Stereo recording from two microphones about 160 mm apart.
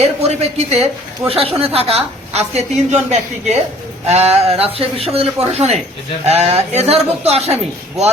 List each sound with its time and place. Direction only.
0.2 s a woman's voice: 40° right (ahead or behind)